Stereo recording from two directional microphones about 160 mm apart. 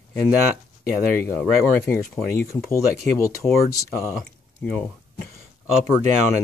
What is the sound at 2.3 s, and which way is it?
Speech, 20° left (ahead or behind).